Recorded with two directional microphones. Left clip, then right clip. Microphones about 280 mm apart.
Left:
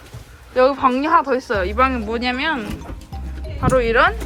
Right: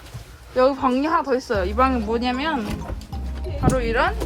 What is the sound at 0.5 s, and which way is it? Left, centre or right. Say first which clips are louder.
Speech: left 3 dB; centre.